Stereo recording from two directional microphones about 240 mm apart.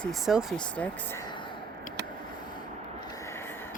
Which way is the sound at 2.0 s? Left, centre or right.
Right.